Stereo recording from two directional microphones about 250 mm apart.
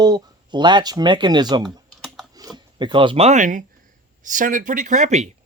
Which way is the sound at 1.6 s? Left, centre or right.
Centre.